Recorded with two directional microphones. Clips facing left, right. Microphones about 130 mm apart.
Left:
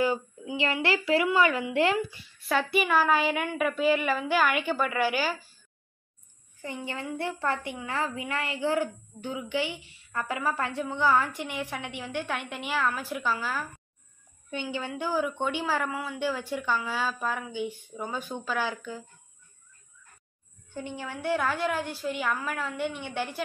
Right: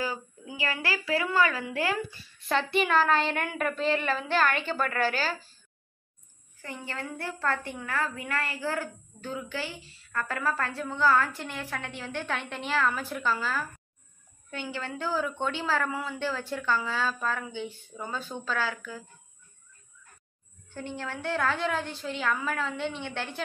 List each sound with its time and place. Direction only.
0.8 s speech: 25° left (ahead or behind)
2.4 s a woman's voice: 5° left (ahead or behind)
6.6 s a woman's voice: 20° left (ahead or behind)
20.7 s a woman's voice: 15° left (ahead or behind)